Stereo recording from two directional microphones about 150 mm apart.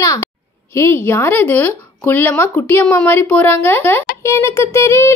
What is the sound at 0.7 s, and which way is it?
Speech, 20° left (ahead or behind).